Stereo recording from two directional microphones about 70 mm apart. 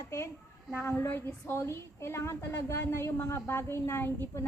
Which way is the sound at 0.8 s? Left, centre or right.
Left.